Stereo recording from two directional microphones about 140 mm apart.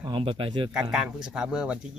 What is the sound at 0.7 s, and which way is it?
Speech, 5° right (ahead or behind).